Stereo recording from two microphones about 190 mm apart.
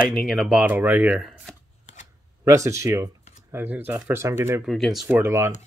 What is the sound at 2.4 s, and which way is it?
Speech, 15° right (ahead or behind).